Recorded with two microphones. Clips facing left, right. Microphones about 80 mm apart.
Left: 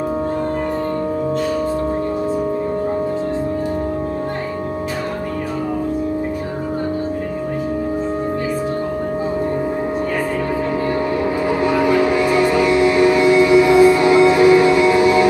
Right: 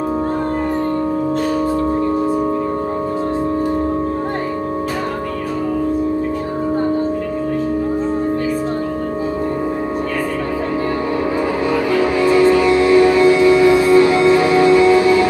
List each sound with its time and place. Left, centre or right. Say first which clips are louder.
11.6 s music: left 2 dB; centre